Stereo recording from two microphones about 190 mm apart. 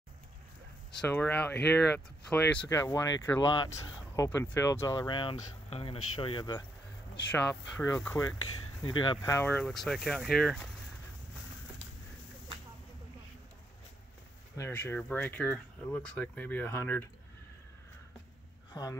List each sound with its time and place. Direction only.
1.0 s speech: 10° left (ahead or behind)
7.2 s speech: 5° left (ahead or behind)
14.6 s speech: 10° left (ahead or behind)
18.7 s speech: 20° left (ahead or behind)